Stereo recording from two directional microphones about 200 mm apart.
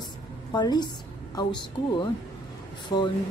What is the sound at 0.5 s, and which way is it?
A woman's voice, 20° left (ahead or behind).